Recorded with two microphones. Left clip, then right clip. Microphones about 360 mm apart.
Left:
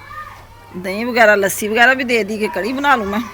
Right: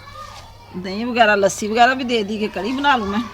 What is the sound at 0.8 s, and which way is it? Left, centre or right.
Speech, centre.